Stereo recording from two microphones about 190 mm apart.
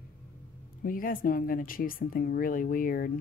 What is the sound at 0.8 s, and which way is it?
Speech, 45° left (ahead or behind).